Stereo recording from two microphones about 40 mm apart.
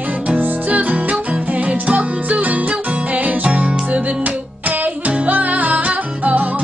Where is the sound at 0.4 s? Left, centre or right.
Right.